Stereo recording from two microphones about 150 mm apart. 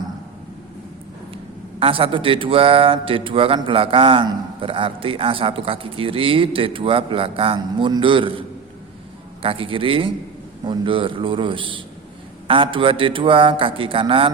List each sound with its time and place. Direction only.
1.8 s speech: 35° right (ahead or behind)